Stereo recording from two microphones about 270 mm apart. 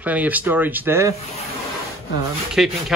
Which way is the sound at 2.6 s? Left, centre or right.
Centre.